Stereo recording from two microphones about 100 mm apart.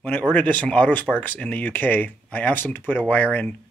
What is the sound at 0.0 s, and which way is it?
Speech, 15° left (ahead or behind).